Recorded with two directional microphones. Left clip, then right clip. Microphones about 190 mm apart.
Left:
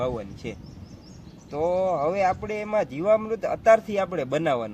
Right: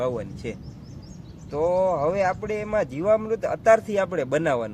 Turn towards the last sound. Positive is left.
turn(degrees=-15)  # may be behind; listen again after turning